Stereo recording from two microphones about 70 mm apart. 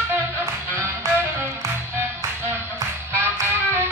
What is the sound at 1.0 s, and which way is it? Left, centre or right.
Music, right.